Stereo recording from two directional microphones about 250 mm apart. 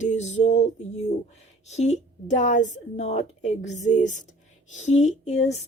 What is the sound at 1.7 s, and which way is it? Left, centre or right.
Speech, left.